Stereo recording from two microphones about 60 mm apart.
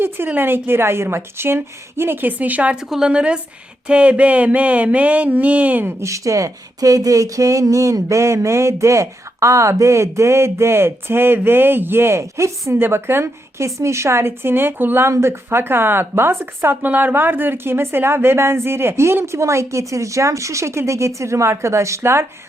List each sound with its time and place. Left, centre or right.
0.3 s a woman's voice: right
2.7 s a woman's voice: centre
3.8 s a sound: centre
5.8 s a woman's voice: right
12.8 s a woman's voice: right
16.8 s a woman's voice: right